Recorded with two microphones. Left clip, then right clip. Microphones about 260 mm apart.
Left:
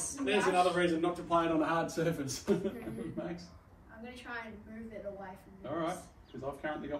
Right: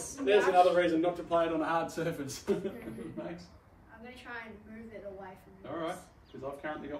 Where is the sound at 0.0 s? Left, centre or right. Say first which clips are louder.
Right 4 dB; left.